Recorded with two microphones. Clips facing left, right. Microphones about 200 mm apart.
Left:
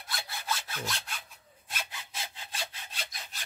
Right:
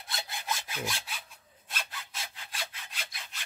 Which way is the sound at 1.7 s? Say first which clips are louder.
Left 1 dB; 10° left (ahead or behind).